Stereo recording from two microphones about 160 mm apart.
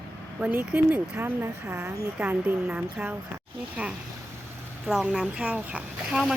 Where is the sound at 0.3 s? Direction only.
5° right (ahead or behind).